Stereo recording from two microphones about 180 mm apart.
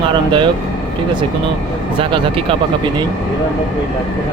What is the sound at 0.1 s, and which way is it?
Speech, 25° right (ahead or behind).